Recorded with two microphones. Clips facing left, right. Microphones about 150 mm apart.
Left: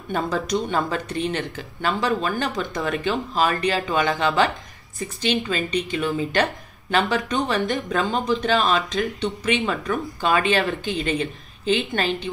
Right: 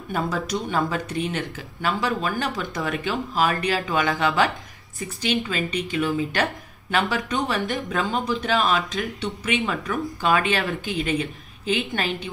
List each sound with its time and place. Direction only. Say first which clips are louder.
0.1 s a woman's voice: left 2 dB; 5° right (ahead or behind)